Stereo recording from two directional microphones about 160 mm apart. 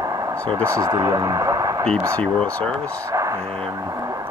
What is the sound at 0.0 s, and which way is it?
Speech, 20° right (ahead or behind).